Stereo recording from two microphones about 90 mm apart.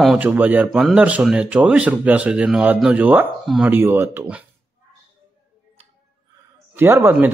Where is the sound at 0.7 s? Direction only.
Centre (ahead or behind).